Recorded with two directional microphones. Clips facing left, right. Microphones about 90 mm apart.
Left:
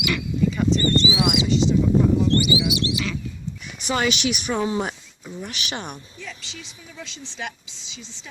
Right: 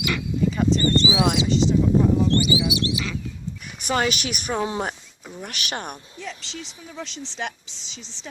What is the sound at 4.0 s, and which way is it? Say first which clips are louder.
Speech: left 2 dB; 45° right (ahead or behind).